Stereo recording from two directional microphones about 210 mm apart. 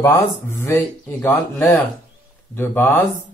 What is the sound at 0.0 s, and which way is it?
Speech, 15° left (ahead or behind).